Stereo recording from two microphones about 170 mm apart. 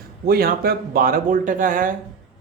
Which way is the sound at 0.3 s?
60° right (ahead or behind).